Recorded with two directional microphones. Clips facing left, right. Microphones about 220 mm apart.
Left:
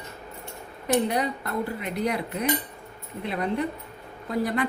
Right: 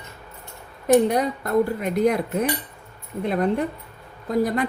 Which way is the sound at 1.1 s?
45° right (ahead or behind).